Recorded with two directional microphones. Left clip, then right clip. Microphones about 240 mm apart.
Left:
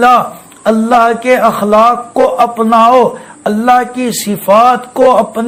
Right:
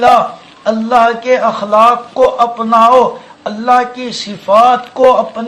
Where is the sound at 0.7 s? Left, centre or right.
Left.